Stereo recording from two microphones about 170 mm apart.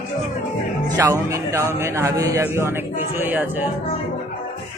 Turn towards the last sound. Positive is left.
turn(degrees=-10)  # may be behind; listen again after turning